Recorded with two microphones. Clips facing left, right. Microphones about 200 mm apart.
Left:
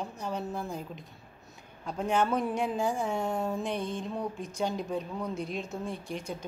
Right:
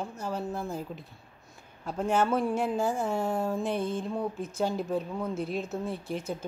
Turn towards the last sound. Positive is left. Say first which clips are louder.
# right 3 dB
turn(degrees=-5)  # may be behind; listen again after turning